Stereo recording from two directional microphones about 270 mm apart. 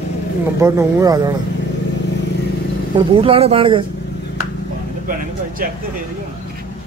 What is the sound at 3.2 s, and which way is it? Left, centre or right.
Speech, right.